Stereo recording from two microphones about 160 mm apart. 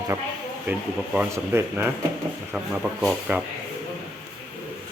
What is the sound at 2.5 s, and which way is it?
Speech, 5° right (ahead or behind).